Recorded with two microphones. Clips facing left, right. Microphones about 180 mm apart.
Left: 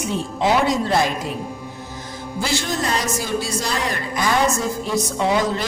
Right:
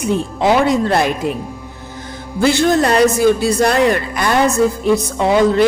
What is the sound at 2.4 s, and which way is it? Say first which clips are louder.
A woman's voice: right 11 dB; 60° right (ahead or behind).